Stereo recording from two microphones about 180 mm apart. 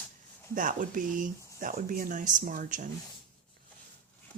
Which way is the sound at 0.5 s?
45° right (ahead or behind).